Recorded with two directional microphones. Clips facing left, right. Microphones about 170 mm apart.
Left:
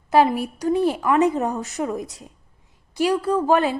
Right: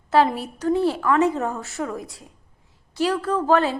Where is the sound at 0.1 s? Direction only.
10° left (ahead or behind).